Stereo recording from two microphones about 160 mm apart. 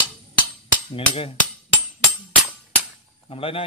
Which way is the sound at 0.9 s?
35° left (ahead or behind).